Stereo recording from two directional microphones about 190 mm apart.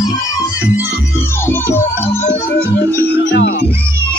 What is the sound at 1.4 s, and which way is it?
Music, 10° left (ahead or behind).